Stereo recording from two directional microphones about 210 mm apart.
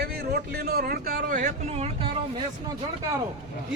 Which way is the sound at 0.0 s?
50° right (ahead or behind).